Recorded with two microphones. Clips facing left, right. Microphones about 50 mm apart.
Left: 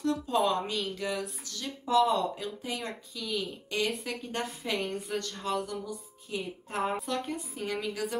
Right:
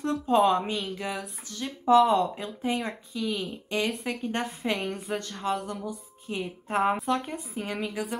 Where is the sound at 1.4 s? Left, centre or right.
Right.